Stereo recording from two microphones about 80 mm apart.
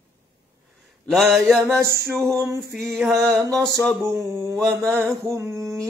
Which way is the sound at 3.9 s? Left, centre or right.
Right.